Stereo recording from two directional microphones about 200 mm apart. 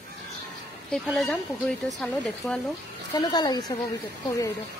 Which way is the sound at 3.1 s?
20° left (ahead or behind).